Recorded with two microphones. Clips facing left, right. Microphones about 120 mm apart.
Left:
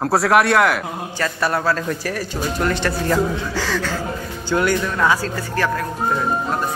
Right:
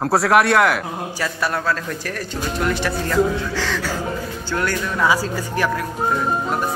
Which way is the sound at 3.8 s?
10° right (ahead or behind).